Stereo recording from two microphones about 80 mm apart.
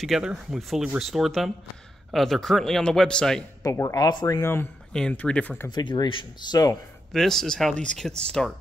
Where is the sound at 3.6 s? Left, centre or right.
Left.